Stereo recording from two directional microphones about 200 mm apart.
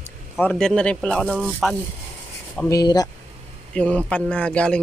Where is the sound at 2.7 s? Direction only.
20° left (ahead or behind).